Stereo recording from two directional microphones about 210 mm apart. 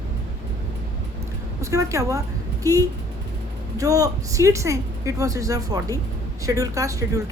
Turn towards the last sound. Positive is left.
turn(degrees=-15)  # may be behind; listen again after turning